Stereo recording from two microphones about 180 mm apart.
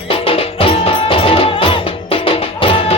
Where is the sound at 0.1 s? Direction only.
30° left (ahead or behind).